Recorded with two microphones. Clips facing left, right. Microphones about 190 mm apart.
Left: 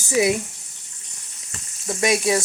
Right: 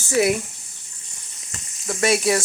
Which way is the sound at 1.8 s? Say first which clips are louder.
Right 1 dB; 15° left (ahead or behind).